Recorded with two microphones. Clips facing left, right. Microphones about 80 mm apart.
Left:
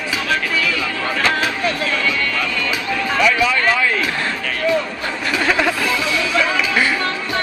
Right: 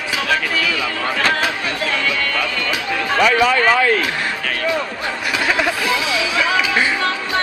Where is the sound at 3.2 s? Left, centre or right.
Right.